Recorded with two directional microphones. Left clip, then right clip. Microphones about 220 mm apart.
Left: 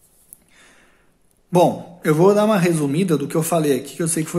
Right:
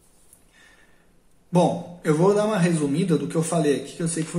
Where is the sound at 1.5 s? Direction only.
45° left (ahead or behind).